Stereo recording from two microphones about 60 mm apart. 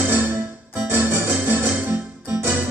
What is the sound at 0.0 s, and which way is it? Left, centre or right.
Music, right.